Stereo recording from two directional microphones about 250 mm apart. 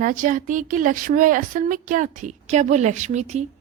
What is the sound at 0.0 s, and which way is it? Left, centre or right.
A woman's voice, right.